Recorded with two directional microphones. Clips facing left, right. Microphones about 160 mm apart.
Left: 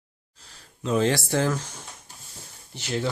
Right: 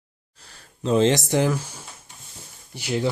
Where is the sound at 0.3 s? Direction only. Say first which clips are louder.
Right 2 dB; 60° right (ahead or behind).